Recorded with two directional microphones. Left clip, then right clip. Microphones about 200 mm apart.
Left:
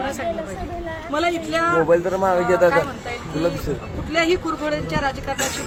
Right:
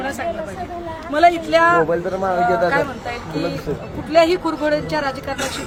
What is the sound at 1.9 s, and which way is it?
Speech, 50° left (ahead or behind).